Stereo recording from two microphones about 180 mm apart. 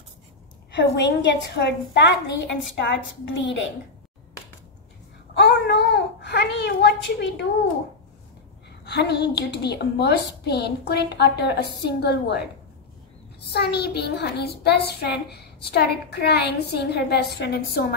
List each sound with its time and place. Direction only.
0.7 s a woman's voice: 75° left (ahead or behind)
3.3 s a woman's voice: 90° left
5.3 s babbling: 70° left (ahead or behind)
8.8 s a woman's voice: 70° left (ahead or behind)
13.5 s a woman's voice: 65° left (ahead or behind)